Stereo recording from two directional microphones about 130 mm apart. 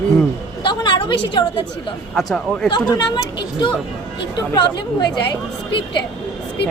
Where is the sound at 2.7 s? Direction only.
35° left (ahead or behind).